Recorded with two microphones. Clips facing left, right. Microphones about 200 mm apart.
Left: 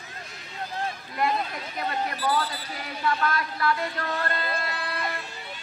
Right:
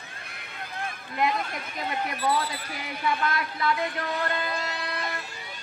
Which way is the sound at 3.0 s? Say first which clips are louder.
Left 1 dB; 15° right (ahead or behind).